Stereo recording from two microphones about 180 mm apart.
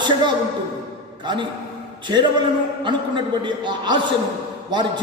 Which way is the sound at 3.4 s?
25° right (ahead or behind).